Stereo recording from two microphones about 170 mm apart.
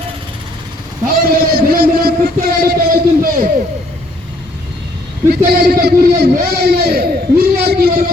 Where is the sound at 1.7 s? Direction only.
65° right (ahead or behind).